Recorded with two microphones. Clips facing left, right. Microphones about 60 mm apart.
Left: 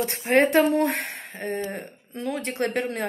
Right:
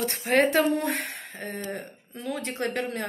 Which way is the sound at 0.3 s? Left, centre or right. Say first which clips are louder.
Left 2 dB; left.